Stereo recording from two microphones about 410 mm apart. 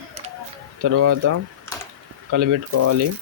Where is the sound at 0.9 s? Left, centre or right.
Right.